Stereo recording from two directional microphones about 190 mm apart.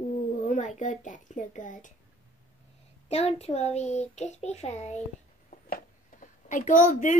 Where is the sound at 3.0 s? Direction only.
35° left (ahead or behind).